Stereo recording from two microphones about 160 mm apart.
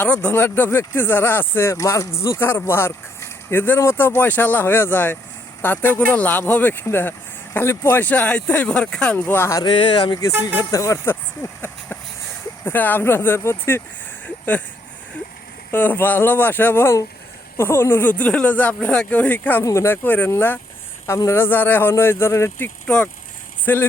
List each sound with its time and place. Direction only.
0.0 s speech: 10° left (ahead or behind)
9.6 s speech: 30° left (ahead or behind)
12.6 s speech: 10° left (ahead or behind)
14.3 s a sound: 10° left (ahead or behind)
15.7 s speech: 10° left (ahead or behind)